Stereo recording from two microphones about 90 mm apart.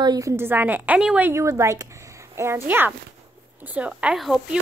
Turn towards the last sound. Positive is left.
turn(degrees=0)  # may be behind; listen again after turning